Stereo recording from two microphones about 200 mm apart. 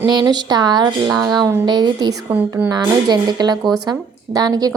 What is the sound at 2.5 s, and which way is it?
Speech, 10° right (ahead or behind).